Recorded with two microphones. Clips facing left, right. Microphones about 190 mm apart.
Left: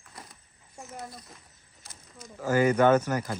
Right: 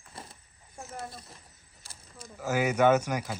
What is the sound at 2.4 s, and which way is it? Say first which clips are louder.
Speech: left 3 dB; 10° right (ahead or behind).